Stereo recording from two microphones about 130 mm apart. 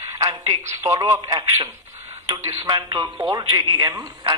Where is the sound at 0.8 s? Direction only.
25° right (ahead or behind).